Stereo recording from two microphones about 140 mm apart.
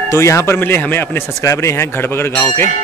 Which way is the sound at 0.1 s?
20° left (ahead or behind).